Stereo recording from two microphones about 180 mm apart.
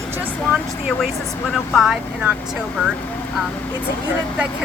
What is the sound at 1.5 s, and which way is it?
Speech, centre (ahead or behind).